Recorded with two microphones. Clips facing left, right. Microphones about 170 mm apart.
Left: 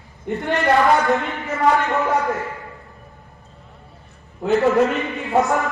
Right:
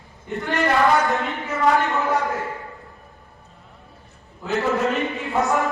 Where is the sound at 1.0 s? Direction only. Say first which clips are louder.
Left 3 dB; centre (ahead or behind).